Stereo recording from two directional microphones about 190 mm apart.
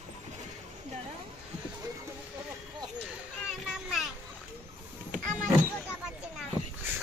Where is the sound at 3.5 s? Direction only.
Centre (ahead or behind).